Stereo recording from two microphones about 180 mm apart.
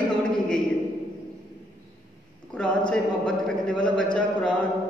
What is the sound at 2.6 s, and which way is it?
A man's voice, 5° left (ahead or behind).